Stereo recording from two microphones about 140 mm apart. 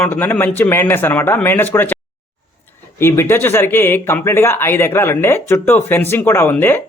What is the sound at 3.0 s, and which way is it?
Speech, 15° left (ahead or behind).